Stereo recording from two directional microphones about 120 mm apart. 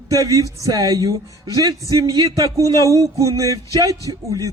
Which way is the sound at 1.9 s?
30° right (ahead or behind).